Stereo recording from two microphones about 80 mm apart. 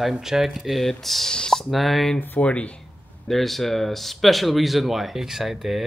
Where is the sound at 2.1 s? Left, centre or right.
Centre.